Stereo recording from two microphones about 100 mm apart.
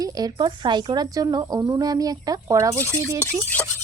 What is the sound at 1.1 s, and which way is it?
Speech, 40° right (ahead or behind).